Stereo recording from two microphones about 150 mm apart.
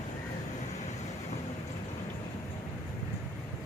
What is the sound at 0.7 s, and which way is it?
Vehicle, 50° left (ahead or behind).